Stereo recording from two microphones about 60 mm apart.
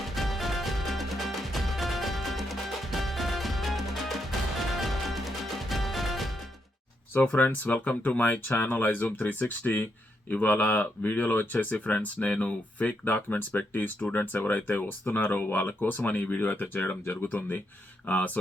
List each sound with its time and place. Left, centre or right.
0.0 s music: centre
7.1 s speech: left
9.0 s speech: left